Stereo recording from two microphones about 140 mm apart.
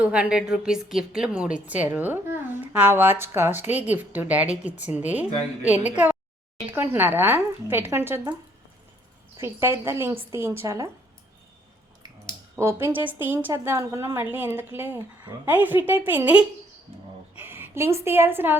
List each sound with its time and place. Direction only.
0.0 s a woman's voice: 10° right (ahead or behind)
9.4 s a woman's voice: 20° right (ahead or behind)
12.8 s a woman's voice: 15° right (ahead or behind)